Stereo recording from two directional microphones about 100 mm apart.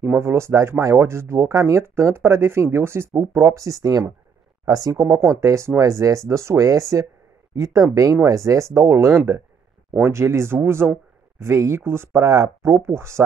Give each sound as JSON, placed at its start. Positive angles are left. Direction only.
{"t": 0.0, "sound": "speech", "side_deg": -25}